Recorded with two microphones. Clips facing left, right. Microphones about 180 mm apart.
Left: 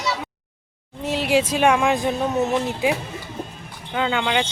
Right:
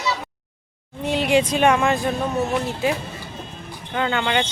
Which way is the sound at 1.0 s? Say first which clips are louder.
Right 1 dB; centre (ahead or behind).